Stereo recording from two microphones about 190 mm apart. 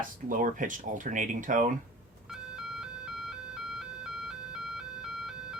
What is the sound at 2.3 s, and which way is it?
Ice cream truck, 5° right (ahead or behind).